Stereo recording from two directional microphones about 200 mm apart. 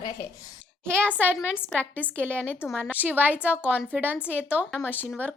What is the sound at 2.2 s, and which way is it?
A woman's voice, 10° right (ahead or behind).